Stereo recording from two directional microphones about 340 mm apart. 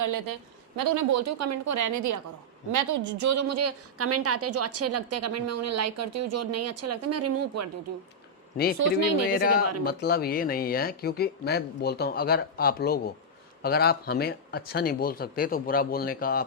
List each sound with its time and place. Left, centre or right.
0.0 s a woman's voice: right
8.8 s a woman's voice: right
9.8 s speech: left